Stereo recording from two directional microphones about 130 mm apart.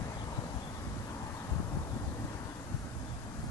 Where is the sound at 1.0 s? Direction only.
25° left (ahead or behind).